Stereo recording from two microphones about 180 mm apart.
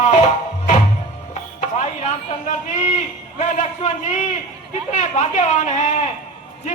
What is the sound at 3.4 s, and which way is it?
A man's voice, 40° left (ahead or behind).